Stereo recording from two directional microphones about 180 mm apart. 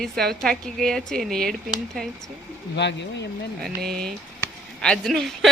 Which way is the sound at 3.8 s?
55° right (ahead or behind).